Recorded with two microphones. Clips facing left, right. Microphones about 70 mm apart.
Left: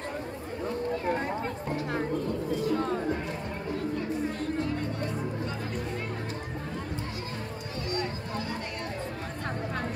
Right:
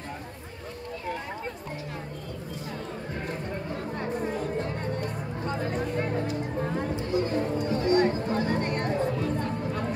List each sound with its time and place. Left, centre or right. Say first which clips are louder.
7.9 s music: right 9 dB; right